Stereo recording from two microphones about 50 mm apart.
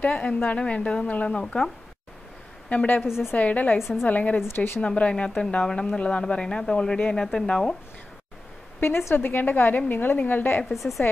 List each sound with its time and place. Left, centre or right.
0.0 s a woman's voice: left
1.4 s speech: centre
2.7 s a woman's voice: left
3.0 s a woman's voice: centre
3.3 s a woman's voice: left
3.7 s a woman's voice: centre
4.0 s a woman's voice: left
4.5 s a woman's voice: left
4.8 s a woman's voice: left
9.1 s a woman's voice: left
10.6 s a woman's voice: centre